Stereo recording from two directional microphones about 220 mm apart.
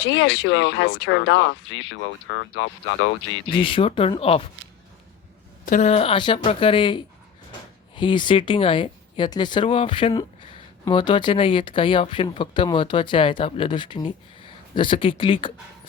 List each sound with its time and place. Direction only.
0.1 s speech: 60° left (ahead or behind)
3.6 s speech: 25° left (ahead or behind)
5.6 s speech: 35° left (ahead or behind)